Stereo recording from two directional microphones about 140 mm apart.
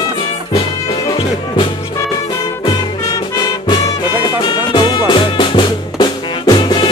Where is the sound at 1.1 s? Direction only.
40° left (ahead or behind).